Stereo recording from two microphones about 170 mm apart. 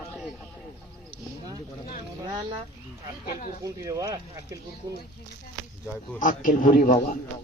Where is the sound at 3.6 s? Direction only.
20° right (ahead or behind).